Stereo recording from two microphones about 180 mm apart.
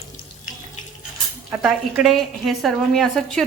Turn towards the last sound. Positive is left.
turn(degrees=0)  # may be behind; listen again after turning